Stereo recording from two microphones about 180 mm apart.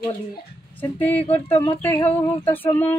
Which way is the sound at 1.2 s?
35° left (ahead or behind).